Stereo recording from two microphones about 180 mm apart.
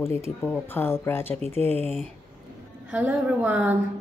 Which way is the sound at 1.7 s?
35° right (ahead or behind).